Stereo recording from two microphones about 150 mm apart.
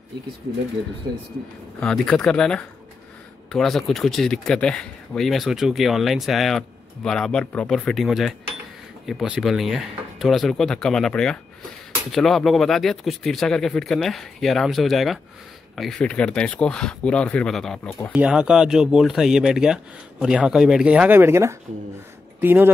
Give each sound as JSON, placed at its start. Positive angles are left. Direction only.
{"t": 1.8, "sound": "speech", "side_deg": 5}